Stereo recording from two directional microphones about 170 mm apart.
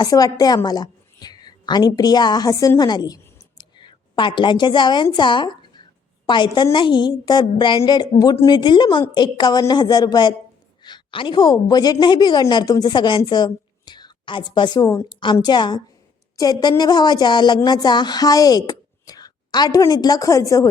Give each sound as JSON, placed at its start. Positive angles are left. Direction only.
{"t": 0.0, "sound": "a woman's voice", "side_deg": 20}
{"t": 3.6, "sound": "a sound", "side_deg": 25}
{"t": 5.0, "sound": "a woman's voice", "side_deg": 25}